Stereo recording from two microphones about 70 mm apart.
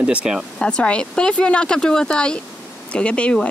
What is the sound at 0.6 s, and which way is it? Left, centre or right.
Speech, centre.